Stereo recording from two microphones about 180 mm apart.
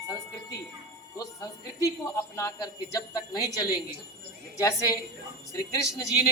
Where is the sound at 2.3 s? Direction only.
20° left (ahead or behind).